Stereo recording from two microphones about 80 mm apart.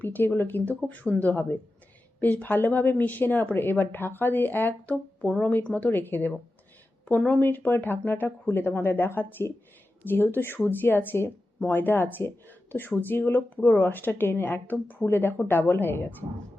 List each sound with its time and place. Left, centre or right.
0.0 s speech: left